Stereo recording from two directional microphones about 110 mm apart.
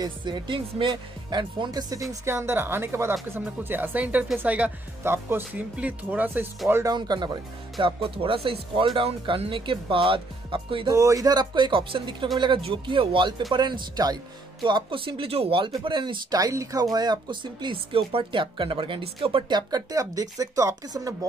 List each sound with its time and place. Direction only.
0.0 s speech: 45° right (ahead or behind)
2.0 s speech: 25° right (ahead or behind)
6.9 s speech: 40° right (ahead or behind)
7.8 s speech: 55° right (ahead or behind)
10.9 s speech: 30° right (ahead or behind); by 16.3 s 45° right (ahead or behind)
16.3 s speech: 35° right (ahead or behind); by 19.4 s 55° right (ahead or behind)
19.5 s speech: 35° right (ahead or behind)